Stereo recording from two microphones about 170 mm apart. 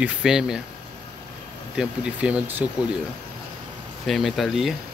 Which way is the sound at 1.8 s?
5° right (ahead or behind).